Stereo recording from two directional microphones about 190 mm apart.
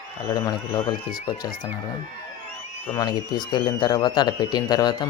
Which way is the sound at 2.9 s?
20° left (ahead or behind).